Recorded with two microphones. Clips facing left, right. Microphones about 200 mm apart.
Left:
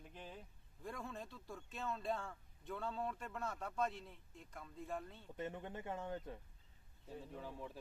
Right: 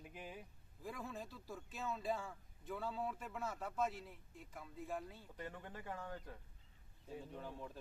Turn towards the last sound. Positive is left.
turn(degrees=0)  # may be behind; listen again after turning